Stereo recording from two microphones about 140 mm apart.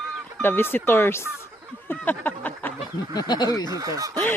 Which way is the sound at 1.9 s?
15° left (ahead or behind).